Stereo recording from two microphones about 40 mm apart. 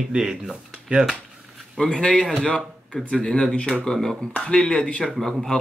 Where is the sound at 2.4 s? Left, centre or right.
Left; by 4.2 s centre.